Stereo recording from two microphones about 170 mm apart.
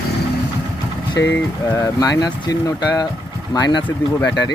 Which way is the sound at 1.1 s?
20° left (ahead or behind).